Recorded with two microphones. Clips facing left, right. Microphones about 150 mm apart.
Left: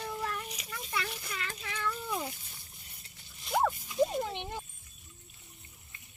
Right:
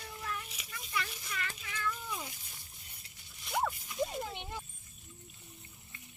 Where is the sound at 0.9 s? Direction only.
65° left (ahead or behind).